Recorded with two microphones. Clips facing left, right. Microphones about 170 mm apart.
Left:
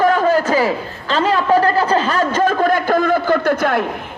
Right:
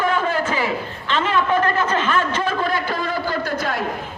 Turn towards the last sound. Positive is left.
turn(degrees=60)  # may be behind; listen again after turning